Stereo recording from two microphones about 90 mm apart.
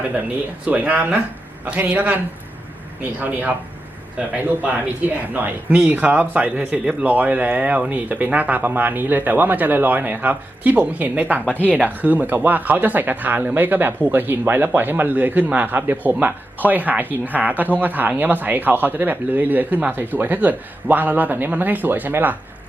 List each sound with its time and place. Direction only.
0.6 s speech: 15° right (ahead or behind)
5.3 s speech: 20° right (ahead or behind)
11.4 s speech: 20° left (ahead or behind)
11.7 s speech: 15° right (ahead or behind)